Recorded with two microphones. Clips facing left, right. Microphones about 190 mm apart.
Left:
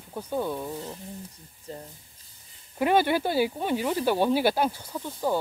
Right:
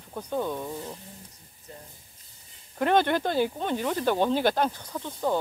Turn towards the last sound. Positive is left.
turn(degrees=10)  # may be behind; listen again after turning